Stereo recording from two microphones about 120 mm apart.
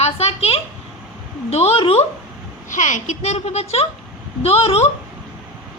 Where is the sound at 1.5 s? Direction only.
60° left (ahead or behind).